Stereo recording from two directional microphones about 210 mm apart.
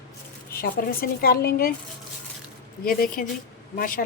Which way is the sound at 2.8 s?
40° left (ahead or behind).